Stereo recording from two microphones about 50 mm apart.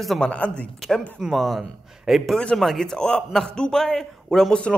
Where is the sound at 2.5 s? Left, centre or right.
Centre.